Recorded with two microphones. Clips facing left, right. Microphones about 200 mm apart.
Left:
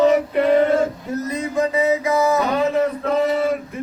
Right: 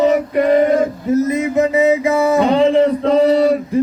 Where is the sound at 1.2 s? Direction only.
20° right (ahead or behind).